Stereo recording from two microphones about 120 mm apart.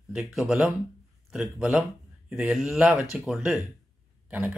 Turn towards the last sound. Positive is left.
turn(degrees=-15)  # may be behind; listen again after turning